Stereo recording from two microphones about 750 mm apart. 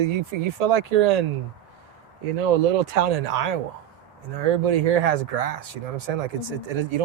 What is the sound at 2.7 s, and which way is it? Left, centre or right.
Speech, right.